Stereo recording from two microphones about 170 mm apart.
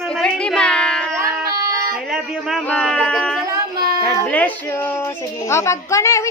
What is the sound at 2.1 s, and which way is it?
Speech, centre (ahead or behind).